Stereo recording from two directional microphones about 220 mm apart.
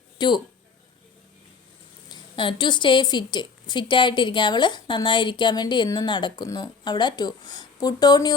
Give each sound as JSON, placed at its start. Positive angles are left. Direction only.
{"t": 0.2, "sound": "speech", "side_deg": 20}
{"t": 2.0, "sound": "a woman's voice", "side_deg": 20}